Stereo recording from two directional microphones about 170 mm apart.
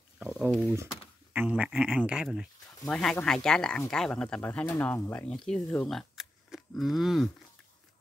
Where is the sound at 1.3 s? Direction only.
10° right (ahead or behind).